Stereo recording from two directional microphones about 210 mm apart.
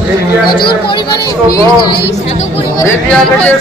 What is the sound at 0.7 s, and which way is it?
Speech, 20° left (ahead or behind).